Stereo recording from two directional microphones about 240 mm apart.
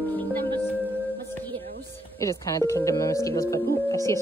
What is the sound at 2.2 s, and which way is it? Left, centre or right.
Speech, centre.